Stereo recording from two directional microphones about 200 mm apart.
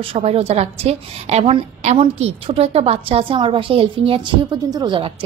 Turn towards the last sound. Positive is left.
turn(degrees=-25)  # may be behind; listen again after turning